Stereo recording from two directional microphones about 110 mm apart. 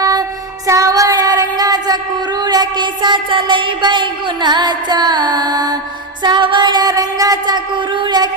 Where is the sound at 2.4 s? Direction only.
40° right (ahead or behind).